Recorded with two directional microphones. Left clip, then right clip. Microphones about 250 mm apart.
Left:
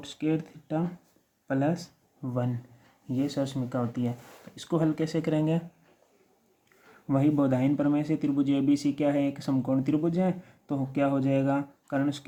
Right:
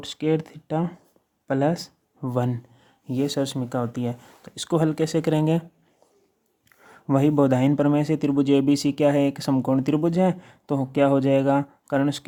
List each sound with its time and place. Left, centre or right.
0.0 s speech: right
7.1 s speech: right